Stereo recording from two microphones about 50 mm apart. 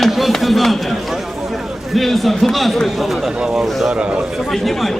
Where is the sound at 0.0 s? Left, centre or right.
Centre.